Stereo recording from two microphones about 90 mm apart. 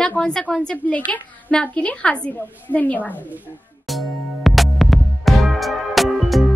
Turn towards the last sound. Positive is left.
turn(degrees=0)  # may be behind; listen again after turning